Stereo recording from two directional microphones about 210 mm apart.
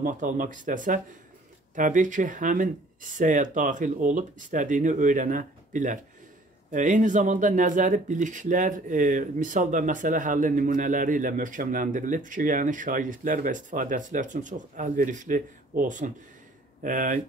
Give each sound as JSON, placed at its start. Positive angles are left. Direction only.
{"t": 0.0, "sound": "speech", "side_deg": -40}